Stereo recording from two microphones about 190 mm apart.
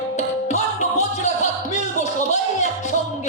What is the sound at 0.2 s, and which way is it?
Music, 35° left (ahead or behind).